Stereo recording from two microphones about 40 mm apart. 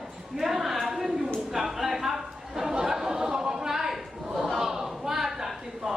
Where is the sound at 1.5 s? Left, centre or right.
Centre.